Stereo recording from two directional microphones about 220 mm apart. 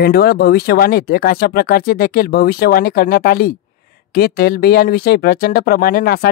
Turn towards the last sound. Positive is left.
turn(degrees=45)  # may be behind; listen again after turning